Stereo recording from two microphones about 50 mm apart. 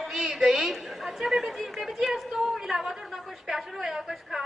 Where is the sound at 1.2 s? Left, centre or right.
Centre.